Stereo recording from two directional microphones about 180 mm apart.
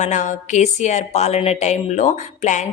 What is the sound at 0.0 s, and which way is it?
Speech, 40° left (ahead or behind).